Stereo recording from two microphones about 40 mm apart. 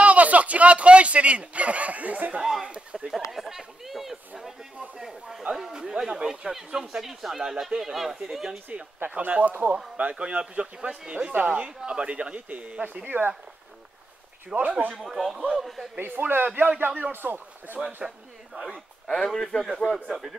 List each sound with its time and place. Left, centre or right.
0.0 s speech: right
2.4 s speech: centre
2.7 s a sound: right
3.1 s a sound: centre
5.6 s speech: centre
9.1 s speech: right
13.0 s a man's voice: right
14.5 s speech: right
15.0 s a man's voice: centre
16.0 s a man's voice: right
17.1 s speech: right
18.0 s speech: centre
19.2 s a man's voice: centre